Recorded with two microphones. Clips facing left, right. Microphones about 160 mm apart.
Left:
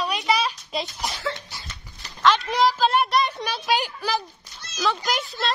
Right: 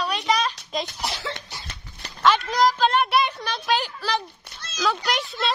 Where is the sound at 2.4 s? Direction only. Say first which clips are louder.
Even; 5° left (ahead or behind).